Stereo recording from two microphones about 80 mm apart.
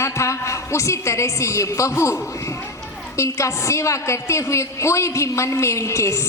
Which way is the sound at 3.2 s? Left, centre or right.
Left.